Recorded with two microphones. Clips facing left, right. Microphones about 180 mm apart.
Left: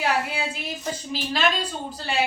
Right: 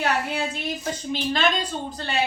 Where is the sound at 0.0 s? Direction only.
5° left (ahead or behind).